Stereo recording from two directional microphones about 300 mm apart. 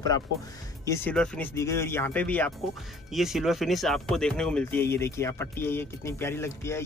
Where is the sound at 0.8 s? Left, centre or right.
Centre.